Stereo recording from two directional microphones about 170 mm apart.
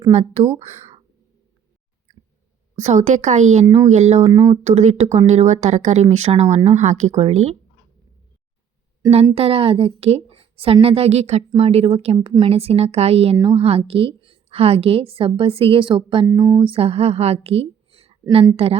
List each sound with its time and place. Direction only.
0.1 s a woman's voice: 40° right (ahead or behind)
2.7 s a woman's voice: 45° right (ahead or behind)
4.2 s speech: 20° right (ahead or behind)
4.6 s a woman's voice: 40° right (ahead or behind)
9.3 s a woman's voice: 35° right (ahead or behind)
16.2 s a woman's voice: 20° right (ahead or behind); by 18.8 s 35° right (ahead or behind)